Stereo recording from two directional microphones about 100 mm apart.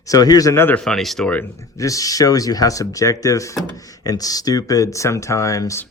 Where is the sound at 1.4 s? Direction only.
30° left (ahead or behind).